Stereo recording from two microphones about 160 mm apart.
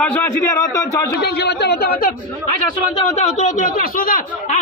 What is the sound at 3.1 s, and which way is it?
Speech, 45° left (ahead or behind).